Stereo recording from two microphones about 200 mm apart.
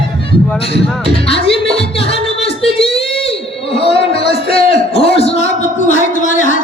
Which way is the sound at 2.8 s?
30° left (ahead or behind).